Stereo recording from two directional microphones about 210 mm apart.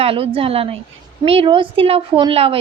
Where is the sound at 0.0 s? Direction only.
25° right (ahead or behind).